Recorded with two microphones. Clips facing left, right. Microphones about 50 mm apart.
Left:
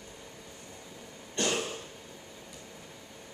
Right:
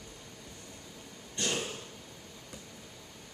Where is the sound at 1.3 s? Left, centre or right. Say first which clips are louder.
Left 4 dB; left.